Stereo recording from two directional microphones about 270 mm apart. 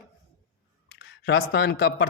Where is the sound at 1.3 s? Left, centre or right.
Left.